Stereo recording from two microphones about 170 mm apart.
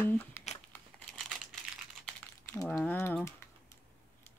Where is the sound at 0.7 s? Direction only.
Centre (ahead or behind).